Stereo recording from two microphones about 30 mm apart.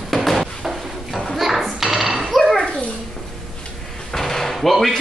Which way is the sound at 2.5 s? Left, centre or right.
Left.